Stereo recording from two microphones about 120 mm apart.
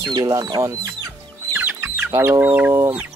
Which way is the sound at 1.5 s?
15° right (ahead or behind).